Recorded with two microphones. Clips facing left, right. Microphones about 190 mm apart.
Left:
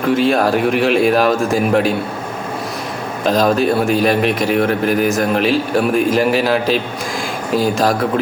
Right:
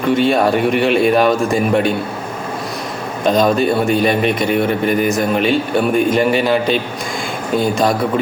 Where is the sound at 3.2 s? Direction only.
Centre (ahead or behind).